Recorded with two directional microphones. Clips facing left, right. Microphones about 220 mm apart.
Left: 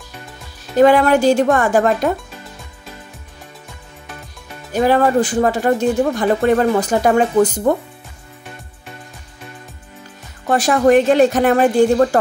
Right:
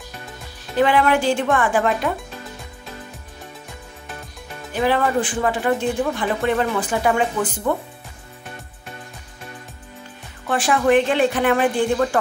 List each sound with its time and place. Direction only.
0.7 s speech: 40° left (ahead or behind)
4.7 s speech: 40° left (ahead or behind)
10.4 s a woman's voice: 40° left (ahead or behind)